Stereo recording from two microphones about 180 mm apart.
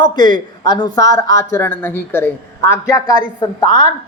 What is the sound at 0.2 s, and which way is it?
A woman's voice, 25° left (ahead or behind).